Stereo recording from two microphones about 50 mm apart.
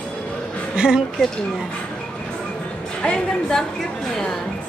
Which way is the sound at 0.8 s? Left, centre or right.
Centre.